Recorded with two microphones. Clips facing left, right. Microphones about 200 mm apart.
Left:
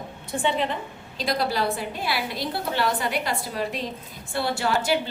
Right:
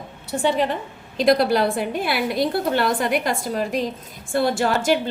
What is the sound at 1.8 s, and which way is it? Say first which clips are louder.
A woman's voice: right 6 dB; 55° right (ahead or behind).